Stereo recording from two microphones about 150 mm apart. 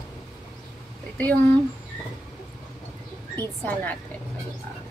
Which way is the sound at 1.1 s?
10° left (ahead or behind).